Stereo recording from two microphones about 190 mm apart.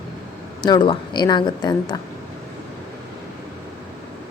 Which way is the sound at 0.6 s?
25° left (ahead or behind).